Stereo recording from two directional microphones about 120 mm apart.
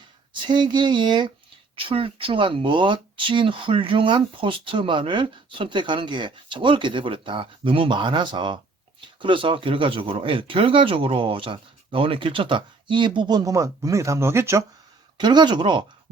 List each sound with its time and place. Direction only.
0.4 s speech: 40° right (ahead or behind); by 14.6 s 20° right (ahead or behind)
15.2 s speech: 40° right (ahead or behind)